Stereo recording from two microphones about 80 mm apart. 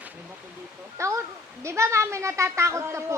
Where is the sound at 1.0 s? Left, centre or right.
Right.